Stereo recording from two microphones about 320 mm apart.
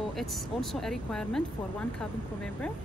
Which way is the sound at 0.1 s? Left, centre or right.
Centre.